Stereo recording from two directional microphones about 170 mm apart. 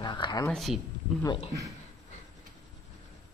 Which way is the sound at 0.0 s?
25° left (ahead or behind).